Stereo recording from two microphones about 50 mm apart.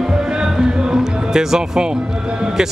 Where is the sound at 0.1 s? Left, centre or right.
Centre.